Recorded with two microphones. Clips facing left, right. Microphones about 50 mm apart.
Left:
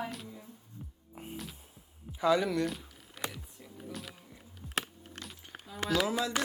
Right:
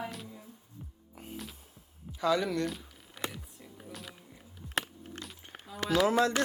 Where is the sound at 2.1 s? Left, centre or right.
Centre.